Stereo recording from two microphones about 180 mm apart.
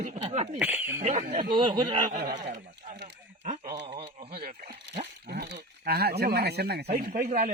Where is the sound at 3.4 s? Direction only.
40° right (ahead or behind).